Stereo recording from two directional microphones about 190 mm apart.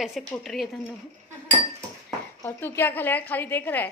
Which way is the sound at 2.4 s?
15° left (ahead or behind).